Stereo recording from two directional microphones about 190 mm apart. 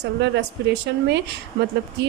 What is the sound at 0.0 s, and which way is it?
A woman's voice, 65° right (ahead or behind).